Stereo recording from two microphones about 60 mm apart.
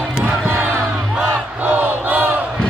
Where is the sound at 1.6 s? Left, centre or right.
Right.